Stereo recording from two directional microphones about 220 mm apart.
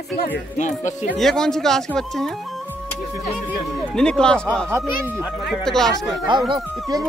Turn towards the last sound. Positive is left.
turn(degrees=-20)  # may be behind; listen again after turning